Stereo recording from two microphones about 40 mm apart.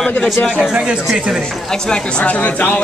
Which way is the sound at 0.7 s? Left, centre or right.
Right.